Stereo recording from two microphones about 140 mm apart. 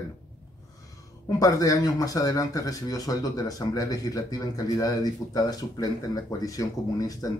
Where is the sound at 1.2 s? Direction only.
25° left (ahead or behind).